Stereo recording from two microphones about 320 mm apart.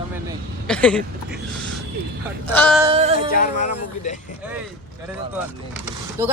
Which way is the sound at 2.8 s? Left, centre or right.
Centre.